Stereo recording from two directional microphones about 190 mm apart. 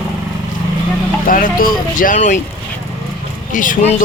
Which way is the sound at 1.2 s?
45° left (ahead or behind).